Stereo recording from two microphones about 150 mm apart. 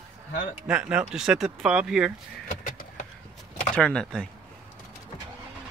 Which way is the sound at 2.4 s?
60° left (ahead or behind).